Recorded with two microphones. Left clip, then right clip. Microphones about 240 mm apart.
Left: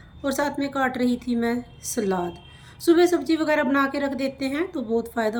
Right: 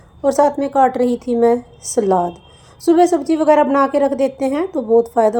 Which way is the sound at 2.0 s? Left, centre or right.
Right.